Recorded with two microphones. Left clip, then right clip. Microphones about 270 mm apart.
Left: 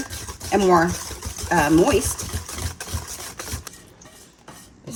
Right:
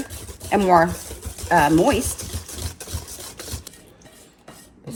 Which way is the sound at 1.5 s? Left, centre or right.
Centre.